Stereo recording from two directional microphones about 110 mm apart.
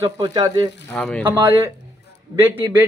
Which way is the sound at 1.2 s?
20° right (ahead or behind).